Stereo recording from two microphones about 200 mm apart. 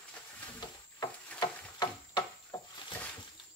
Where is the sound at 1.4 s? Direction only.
20° left (ahead or behind).